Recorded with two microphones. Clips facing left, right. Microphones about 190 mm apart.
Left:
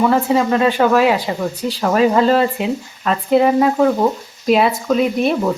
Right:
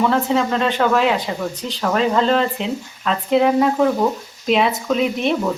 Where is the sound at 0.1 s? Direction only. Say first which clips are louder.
Left 3 dB; 5° left (ahead or behind).